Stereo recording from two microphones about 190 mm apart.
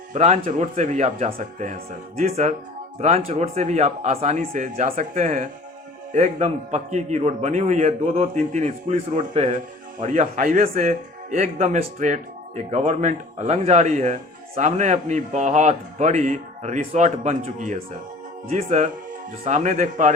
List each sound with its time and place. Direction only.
0.1 s speech: 35° right (ahead or behind)